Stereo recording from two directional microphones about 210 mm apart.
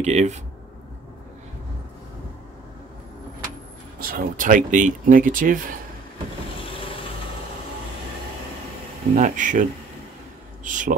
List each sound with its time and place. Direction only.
0.0 s speech: 30° right (ahead or behind)
4.0 s speech: 45° right (ahead or behind)
9.1 s speech: 35° right (ahead or behind)